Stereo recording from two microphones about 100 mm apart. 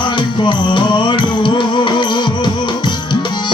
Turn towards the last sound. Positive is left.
turn(degrees=50)  # may be behind; listen again after turning